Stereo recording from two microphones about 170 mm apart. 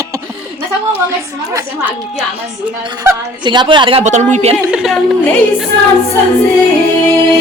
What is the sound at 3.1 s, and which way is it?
Speech, 25° right (ahead or behind).